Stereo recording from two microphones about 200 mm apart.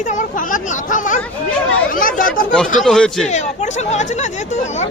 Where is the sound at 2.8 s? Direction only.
Centre (ahead or behind).